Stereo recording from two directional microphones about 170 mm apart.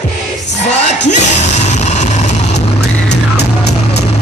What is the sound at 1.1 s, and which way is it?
Yell, 40° left (ahead or behind).